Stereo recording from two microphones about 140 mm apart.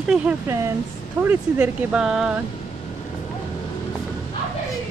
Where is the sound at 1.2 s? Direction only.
15° right (ahead or behind).